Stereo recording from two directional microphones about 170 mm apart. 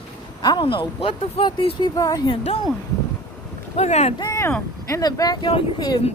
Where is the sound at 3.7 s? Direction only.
40° left (ahead or behind).